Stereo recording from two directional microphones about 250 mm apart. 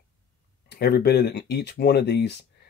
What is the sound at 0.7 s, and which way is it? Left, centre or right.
Speech, left.